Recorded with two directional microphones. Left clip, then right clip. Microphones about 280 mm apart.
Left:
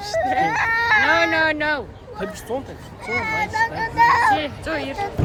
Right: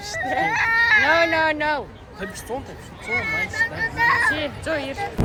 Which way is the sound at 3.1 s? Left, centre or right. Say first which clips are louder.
Left 1 dB; centre.